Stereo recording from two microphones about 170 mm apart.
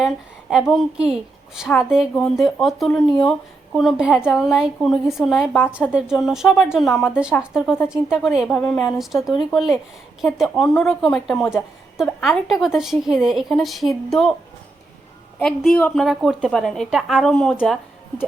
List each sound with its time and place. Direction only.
0.7 s a woman's voice: centre (ahead or behind)
15.4 s a woman's voice: 5° left (ahead or behind)